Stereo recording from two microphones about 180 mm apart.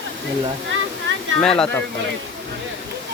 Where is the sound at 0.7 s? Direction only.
90° right.